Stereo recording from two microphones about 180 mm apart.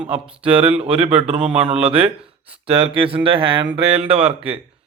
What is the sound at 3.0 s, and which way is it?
Speech, 30° right (ahead or behind).